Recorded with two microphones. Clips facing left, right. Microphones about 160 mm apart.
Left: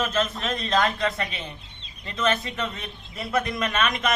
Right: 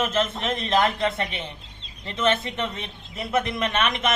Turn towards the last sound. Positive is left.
turn(degrees=-25)  # may be behind; listen again after turning